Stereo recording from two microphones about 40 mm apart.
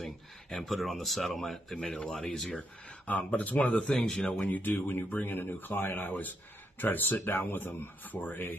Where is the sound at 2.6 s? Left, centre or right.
Left.